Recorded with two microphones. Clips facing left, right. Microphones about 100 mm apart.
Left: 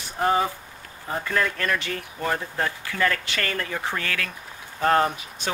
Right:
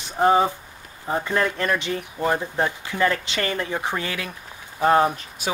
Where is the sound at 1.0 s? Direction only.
20° right (ahead or behind).